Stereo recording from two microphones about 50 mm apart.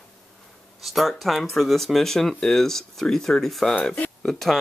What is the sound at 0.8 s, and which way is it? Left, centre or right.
Speech, centre.